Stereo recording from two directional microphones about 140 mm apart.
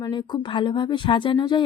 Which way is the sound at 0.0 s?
35° left (ahead or behind).